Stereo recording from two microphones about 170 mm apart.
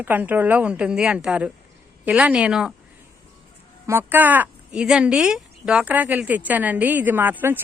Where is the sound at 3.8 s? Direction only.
10° right (ahead or behind).